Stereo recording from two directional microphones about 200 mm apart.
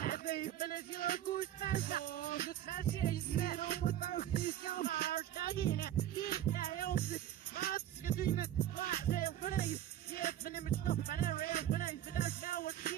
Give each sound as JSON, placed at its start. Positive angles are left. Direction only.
{"t": 0.0, "sound": "music", "side_deg": 45}